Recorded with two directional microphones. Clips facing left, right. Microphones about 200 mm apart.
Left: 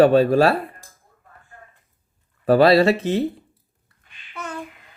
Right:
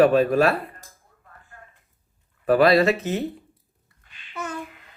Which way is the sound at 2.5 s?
30° left (ahead or behind).